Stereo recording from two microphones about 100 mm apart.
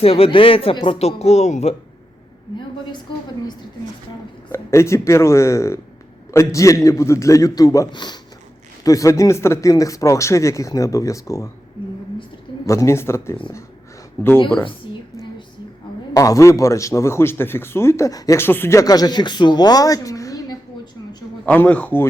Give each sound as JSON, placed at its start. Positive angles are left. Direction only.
{"t": 0.0, "sound": "speech", "side_deg": 80}
{"t": 4.5, "sound": "a man's voice", "side_deg": 30}
{"t": 7.9, "sound": "speech", "side_deg": 50}
{"t": 8.8, "sound": "a man's voice", "side_deg": 35}
{"t": 12.6, "sound": "a man's voice", "side_deg": 30}
{"t": 16.1, "sound": "a man's voice", "side_deg": 35}
{"t": 21.4, "sound": "speech", "side_deg": 15}